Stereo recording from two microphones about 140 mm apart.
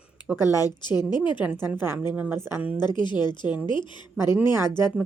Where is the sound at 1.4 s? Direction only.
10° right (ahead or behind).